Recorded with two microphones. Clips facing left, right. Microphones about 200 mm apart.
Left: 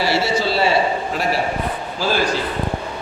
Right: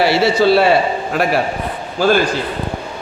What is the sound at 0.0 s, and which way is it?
A man's voice, 65° right (ahead or behind).